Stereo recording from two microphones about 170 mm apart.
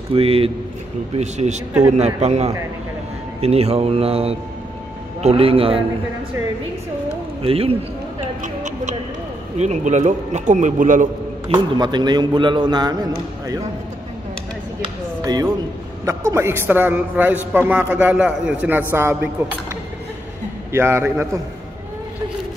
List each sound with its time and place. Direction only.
0.1 s a man's voice: 35° right (ahead or behind)
7.4 s speech: 35° right (ahead or behind)
8.4 s a man's voice: 45° right (ahead or behind)
11.4 s a man's voice: 30° right (ahead or behind)
15.2 s a man's voice: 25° right (ahead or behind)
20.7 s a man's voice: 15° right (ahead or behind)